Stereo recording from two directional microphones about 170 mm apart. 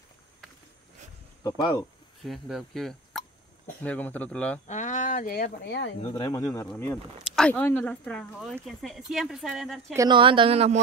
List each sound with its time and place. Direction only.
1.4 s speech: 25° left (ahead or behind)
2.2 s speech: centre (ahead or behind)
4.6 s speech: 45° left (ahead or behind); by 5.9 s 90° left
6.1 s speech: 25° left (ahead or behind)
7.2 s a sound: 5° right (ahead or behind)
7.4 s speech: 10° left (ahead or behind)
9.9 s speech: 25° right (ahead or behind)